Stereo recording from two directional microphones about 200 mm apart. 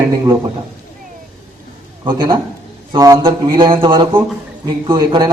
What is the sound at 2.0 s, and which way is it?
A man's voice, 25° right (ahead or behind).